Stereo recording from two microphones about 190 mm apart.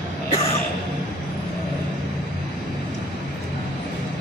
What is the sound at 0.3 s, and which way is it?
Music, 30° left (ahead or behind).